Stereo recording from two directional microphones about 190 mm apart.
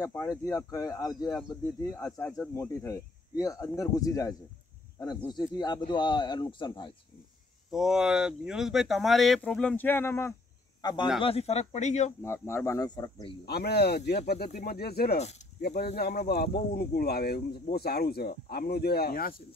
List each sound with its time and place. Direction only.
0.0 s speech: 15° left (ahead or behind)
7.7 s speech: 5° right (ahead or behind); by 12.1 s 40° left (ahead or behind)
12.2 s speech: 15° left (ahead or behind)
13.5 s speech: 55° left (ahead or behind)
15.1 s speech: 40° left (ahead or behind)
16.0 s speech: 55° left (ahead or behind)